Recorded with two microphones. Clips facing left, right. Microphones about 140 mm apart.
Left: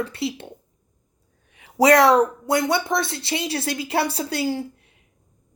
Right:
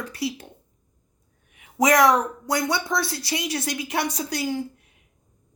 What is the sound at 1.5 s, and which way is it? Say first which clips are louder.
A woman's voice: left 4 dB; 30° left (ahead or behind).